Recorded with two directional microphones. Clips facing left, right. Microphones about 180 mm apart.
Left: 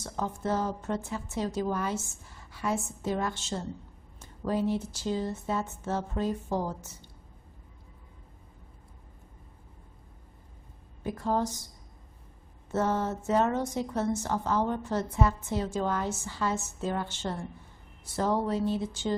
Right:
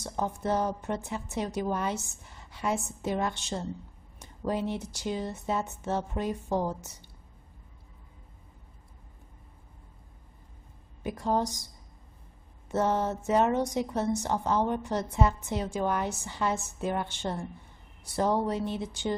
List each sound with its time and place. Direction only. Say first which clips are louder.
0.0 s a woman's voice: right 1 dB; 15° right (ahead or behind)
11.1 s a woman's voice: right 1 dB; 15° right (ahead or behind)
12.7 s a woman's voice: right 1 dB; 15° right (ahead or behind)